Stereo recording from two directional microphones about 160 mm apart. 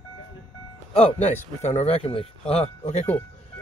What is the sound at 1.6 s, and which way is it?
Speech, 45° left (ahead or behind).